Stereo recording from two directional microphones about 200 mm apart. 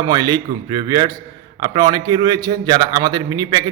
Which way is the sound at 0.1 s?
20° right (ahead or behind).